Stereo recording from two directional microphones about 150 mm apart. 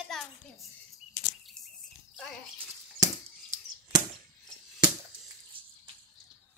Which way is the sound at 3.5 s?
20° right (ahead or behind).